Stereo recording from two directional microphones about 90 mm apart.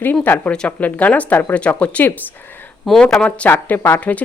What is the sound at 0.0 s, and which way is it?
Speech, 20° left (ahead or behind).